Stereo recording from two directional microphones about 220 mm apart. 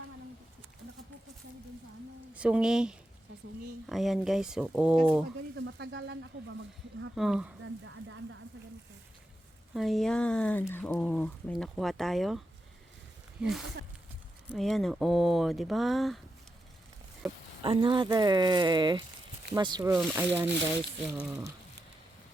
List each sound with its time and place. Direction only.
2.3 s speech: 5° right (ahead or behind)
5.5 s a sound: 55° right (ahead or behind)
7.2 s speech: 5° right (ahead or behind)
7.6 s a sound: 60° right (ahead or behind)
9.7 s speech: centre (ahead or behind)
13.4 s speech: centre (ahead or behind)
17.2 s speech: 25° right (ahead or behind); by 21.2 s 5° right (ahead or behind)